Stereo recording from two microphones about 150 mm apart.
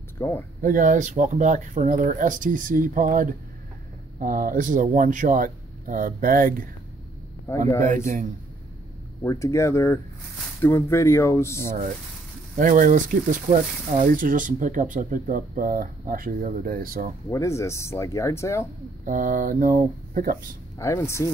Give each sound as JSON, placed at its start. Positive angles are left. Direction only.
{"t": 0.2, "sound": "speech", "side_deg": 15}
{"t": 0.6, "sound": "speech", "side_deg": -65}
{"t": 7.4, "sound": "speech", "side_deg": 20}
{"t": 9.2, "sound": "speech", "side_deg": 20}
{"t": 12.5, "sound": "speech", "side_deg": -60}
{"t": 17.3, "sound": "speech", "side_deg": 20}
{"t": 19.0, "sound": "speech", "side_deg": -65}
{"t": 20.7, "sound": "speech", "side_deg": 20}